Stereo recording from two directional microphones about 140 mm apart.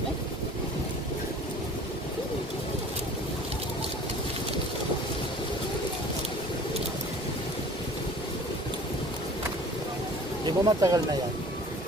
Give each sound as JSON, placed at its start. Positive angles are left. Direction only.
{"t": 10.4, "sound": "speech", "side_deg": -25}